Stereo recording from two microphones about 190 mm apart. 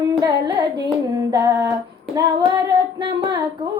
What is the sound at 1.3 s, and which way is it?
Female singing, 15° right (ahead or behind).